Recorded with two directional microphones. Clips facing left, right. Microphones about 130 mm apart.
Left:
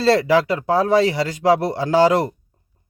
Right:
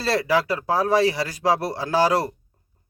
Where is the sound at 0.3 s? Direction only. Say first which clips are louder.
Left 4 dB; 25° left (ahead or behind).